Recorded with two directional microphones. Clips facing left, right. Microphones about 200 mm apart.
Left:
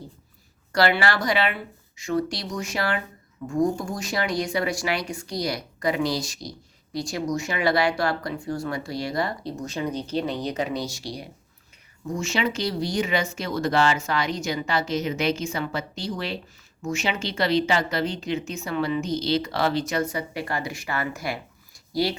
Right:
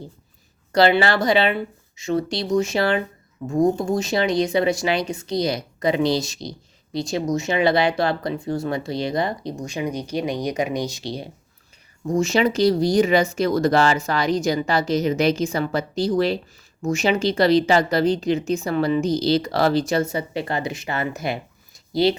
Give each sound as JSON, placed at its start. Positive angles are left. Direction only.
{"t": 0.7, "sound": "speech", "side_deg": -25}
{"t": 12.0, "sound": "speech", "side_deg": -40}
{"t": 19.9, "sound": "speech", "side_deg": -25}